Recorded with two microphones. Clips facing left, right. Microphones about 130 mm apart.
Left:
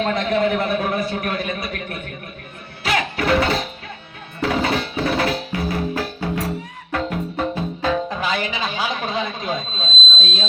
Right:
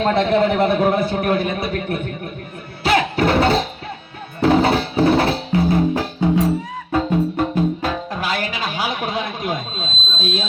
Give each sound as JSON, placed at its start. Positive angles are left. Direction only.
{"t": 0.0, "sound": "a man's voice", "side_deg": -30}
{"t": 2.8, "sound": "music", "side_deg": -30}
{"t": 7.3, "sound": "music", "side_deg": -5}